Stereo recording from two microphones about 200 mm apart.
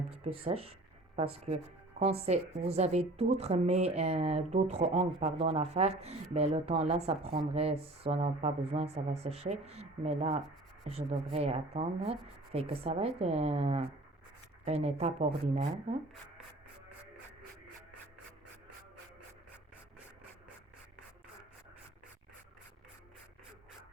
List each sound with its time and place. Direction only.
0.1 s speech: 30° right (ahead or behind)